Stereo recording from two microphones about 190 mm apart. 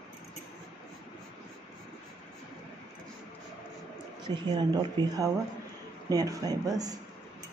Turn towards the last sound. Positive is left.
turn(degrees=-20)  # may be behind; listen again after turning